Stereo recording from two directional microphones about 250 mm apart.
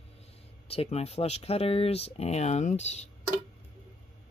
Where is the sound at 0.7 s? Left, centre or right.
Left.